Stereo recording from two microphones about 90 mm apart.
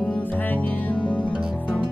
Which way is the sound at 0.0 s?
20° left (ahead or behind).